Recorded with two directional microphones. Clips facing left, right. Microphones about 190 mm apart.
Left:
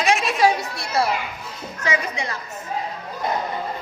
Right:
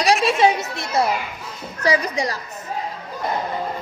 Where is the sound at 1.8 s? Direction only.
35° right (ahead or behind).